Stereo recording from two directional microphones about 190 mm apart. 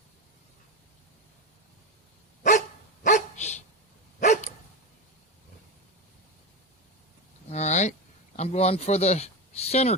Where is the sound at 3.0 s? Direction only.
40° left (ahead or behind).